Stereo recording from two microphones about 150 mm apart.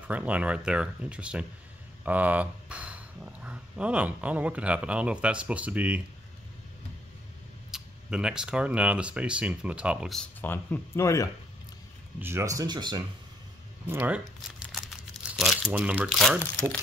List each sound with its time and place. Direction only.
0.1 s speech: 10° right (ahead or behind)
7.7 s speech: 5° right (ahead or behind)
10.1 s speech: 10° left (ahead or behind)
12.2 s speech: 15° right (ahead or behind)
13.8 s crumpling: 10° right (ahead or behind)
16.2 s speech: 5° left (ahead or behind)